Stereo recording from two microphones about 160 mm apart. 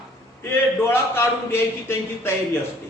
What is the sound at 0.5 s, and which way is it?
A man's voice, 15° left (ahead or behind).